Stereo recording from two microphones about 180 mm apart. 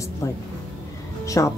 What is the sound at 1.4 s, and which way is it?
Speech, 15° left (ahead or behind).